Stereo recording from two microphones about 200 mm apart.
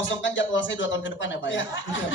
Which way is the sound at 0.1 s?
65° left (ahead or behind).